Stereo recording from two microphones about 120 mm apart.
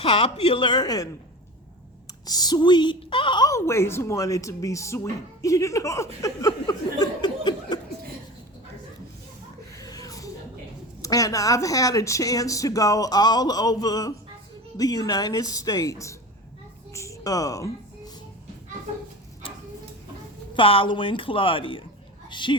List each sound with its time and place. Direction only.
0.0 s speech: 55° left (ahead or behind); by 1.1 s 30° left (ahead or behind)
2.2 s speech: 35° left (ahead or behind)
3.5 s speech: 25° left (ahead or behind)
9.7 s a sound: 30° left (ahead or behind)
11.0 s speech: 30° left (ahead or behind)
16.9 s a sound: 25° left (ahead or behind)
20.5 s a woman's voice: 50° left (ahead or behind)